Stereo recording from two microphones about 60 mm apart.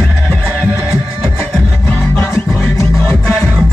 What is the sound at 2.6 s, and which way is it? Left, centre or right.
Music, left.